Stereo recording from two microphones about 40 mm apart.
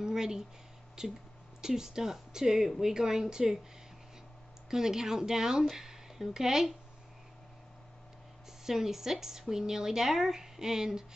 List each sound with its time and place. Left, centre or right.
0.0 s a sound: centre
1.0 s speech: centre
4.6 s speech: centre
8.6 s speech: centre